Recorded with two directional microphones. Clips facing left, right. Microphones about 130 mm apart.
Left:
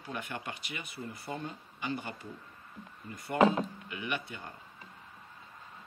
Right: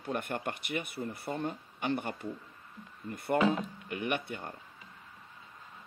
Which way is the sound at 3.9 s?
55° right (ahead or behind).